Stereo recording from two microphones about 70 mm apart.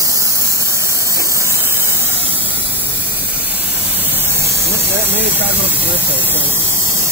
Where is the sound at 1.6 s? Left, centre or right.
Right.